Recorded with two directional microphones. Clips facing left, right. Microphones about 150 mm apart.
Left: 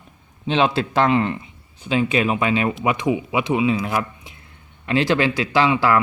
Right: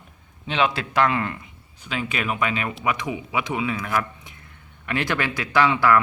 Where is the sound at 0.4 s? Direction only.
30° left (ahead or behind).